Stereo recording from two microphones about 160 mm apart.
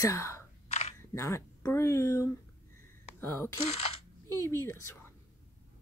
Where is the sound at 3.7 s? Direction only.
40° left (ahead or behind).